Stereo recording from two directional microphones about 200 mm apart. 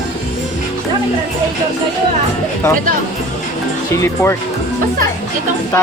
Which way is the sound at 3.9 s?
15° left (ahead or behind).